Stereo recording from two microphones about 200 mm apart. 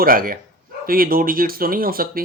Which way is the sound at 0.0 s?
45° right (ahead or behind).